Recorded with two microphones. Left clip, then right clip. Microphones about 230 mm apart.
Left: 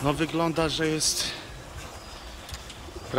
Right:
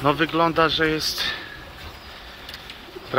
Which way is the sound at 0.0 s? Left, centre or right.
Centre.